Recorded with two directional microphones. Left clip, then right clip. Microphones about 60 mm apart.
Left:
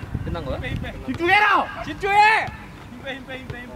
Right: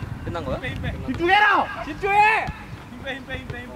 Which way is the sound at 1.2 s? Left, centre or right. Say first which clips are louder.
Even; left.